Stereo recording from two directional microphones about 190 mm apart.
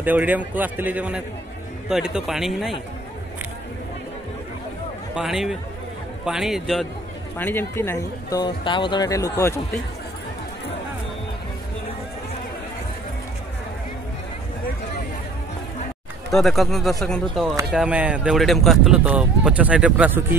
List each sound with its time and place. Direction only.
0.0 s a man's voice: 10° right (ahead or behind)
5.1 s speech: centre (ahead or behind)
7.3 s speech: 10° left (ahead or behind)
16.3 s speech: centre (ahead or behind)